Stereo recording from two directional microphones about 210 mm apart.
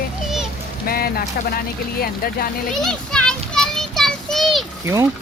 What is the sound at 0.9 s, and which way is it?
Speech, 45° left (ahead or behind).